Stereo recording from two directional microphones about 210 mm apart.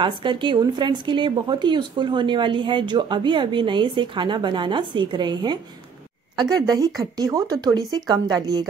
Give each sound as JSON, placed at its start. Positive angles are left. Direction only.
{"t": 0.0, "sound": "a woman's voice", "side_deg": -25}